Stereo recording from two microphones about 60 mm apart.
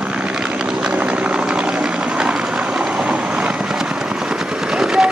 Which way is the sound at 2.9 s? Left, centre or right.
Centre.